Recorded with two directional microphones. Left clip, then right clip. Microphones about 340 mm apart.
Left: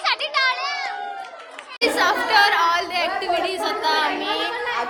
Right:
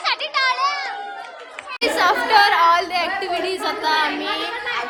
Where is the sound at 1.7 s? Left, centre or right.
Centre.